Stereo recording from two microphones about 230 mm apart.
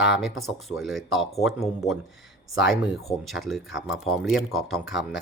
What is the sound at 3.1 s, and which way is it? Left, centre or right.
Speech, centre.